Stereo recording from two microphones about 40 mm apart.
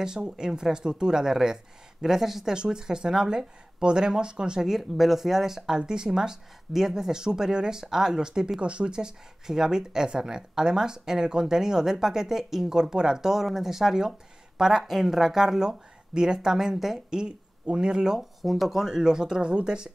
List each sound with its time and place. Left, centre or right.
0.0 s speech: centre
2.5 s speech: right
4.6 s speech: centre
8.5 s speech: right
18.4 s speech: centre
18.9 s speech: centre